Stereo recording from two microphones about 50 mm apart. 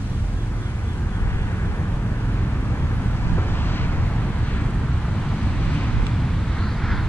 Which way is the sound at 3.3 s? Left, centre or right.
Left.